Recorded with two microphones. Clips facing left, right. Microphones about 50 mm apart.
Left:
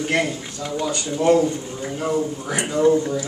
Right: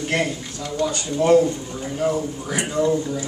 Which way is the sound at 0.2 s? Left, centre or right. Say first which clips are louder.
Even; centre.